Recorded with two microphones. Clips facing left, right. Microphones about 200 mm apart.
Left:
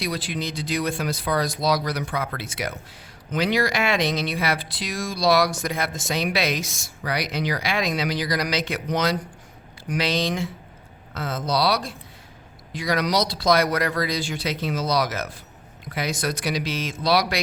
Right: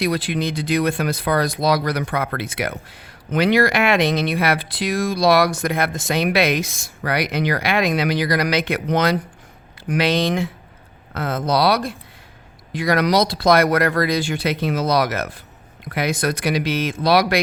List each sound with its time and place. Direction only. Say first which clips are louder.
0.0 s speech: right 7 dB; 60° right (ahead or behind)